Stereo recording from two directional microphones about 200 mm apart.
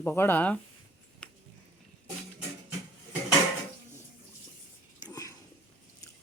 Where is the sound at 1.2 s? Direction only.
5° left (ahead or behind).